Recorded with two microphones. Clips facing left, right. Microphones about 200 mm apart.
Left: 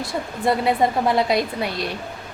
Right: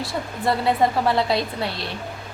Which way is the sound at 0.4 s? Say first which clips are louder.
Left 1 dB; 15° left (ahead or behind).